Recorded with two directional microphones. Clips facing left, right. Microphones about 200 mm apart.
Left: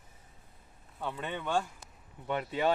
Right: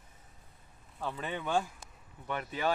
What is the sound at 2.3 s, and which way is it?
Speech, 25° left (ahead or behind).